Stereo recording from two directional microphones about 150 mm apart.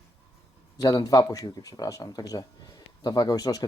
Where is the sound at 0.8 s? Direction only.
25° left (ahead or behind).